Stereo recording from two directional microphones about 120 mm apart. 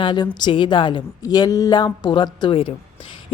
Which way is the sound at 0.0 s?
40° left (ahead or behind).